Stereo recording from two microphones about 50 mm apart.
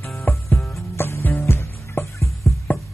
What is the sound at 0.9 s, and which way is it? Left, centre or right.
Music, left.